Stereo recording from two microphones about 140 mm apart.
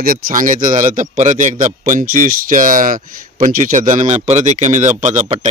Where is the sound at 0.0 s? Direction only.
80° right.